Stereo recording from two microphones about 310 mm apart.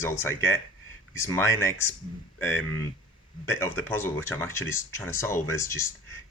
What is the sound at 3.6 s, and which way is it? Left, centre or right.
Speech, centre.